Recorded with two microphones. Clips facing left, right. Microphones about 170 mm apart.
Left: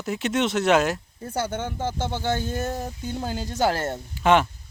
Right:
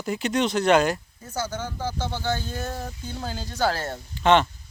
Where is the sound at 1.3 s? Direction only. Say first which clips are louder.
Left 2 dB; 30° left (ahead or behind).